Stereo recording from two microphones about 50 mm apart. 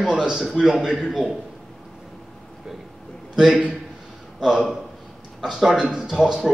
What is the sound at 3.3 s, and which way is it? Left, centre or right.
A man's voice, centre.